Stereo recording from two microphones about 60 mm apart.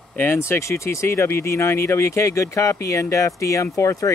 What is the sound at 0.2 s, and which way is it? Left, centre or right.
Speech, left.